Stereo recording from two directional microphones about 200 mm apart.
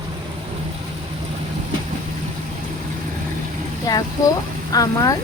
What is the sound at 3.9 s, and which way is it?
Speech, 20° left (ahead or behind).